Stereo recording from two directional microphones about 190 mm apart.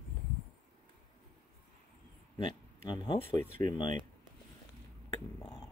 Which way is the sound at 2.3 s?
25° left (ahead or behind).